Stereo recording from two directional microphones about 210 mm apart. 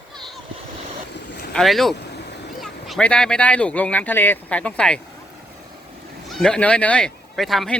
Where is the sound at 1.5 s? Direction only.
Centre (ahead or behind).